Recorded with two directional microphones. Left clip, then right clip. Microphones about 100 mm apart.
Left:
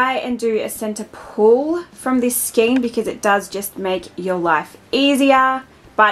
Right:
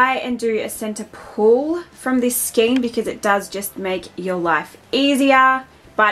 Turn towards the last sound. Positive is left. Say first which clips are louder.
# left 2 dB
turn(degrees=15)  # may be behind; listen again after turning